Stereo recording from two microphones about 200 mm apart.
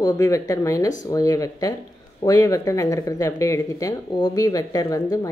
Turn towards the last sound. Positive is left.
turn(degrees=15)  # may be behind; listen again after turning